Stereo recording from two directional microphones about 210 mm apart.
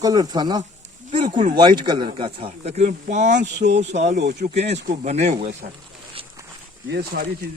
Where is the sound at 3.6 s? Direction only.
55° right (ahead or behind).